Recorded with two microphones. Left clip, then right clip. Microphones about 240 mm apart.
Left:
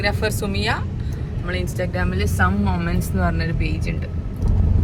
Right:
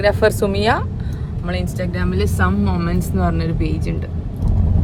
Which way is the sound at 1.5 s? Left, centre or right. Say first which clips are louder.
Right 1 dB; centre.